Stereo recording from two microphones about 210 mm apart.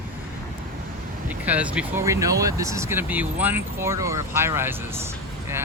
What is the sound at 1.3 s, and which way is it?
Speech, 5° right (ahead or behind).